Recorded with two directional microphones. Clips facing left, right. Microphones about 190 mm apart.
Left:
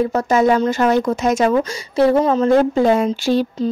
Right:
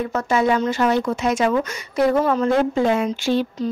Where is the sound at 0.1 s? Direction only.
40° left (ahead or behind).